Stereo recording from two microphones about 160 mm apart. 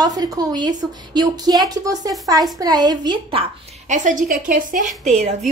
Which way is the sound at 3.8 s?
50° right (ahead or behind).